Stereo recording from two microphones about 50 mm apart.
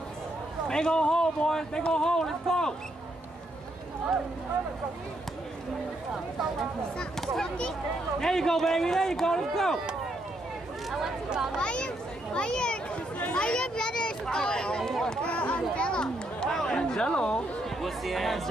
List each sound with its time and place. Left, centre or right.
0.7 s speech: centre
8.2 s speech: centre
10.9 s speech: centre
11.5 s speech: centre
15.2 s speech: left
15.7 s chatter: centre
17.6 s speech: centre